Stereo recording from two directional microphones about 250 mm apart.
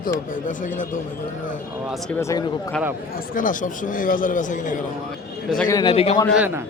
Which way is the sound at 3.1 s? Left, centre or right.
Left.